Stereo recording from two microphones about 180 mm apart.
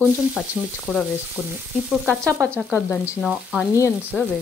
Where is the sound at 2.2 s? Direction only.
15° right (ahead or behind).